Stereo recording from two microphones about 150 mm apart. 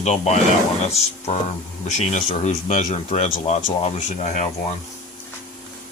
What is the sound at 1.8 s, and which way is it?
Speech, 55° left (ahead or behind).